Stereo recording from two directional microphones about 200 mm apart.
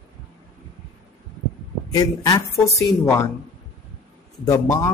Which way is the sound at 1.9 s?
20° left (ahead or behind).